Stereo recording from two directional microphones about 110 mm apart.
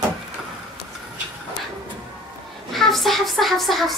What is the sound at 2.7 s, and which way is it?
Speech, centre (ahead or behind).